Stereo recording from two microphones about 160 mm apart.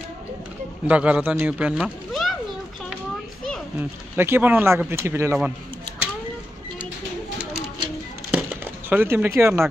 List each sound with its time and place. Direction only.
0.8 s a man's voice: 10° right (ahead or behind)
4.2 s speech: 15° right (ahead or behind)
8.3 s a sound: 10° right (ahead or behind)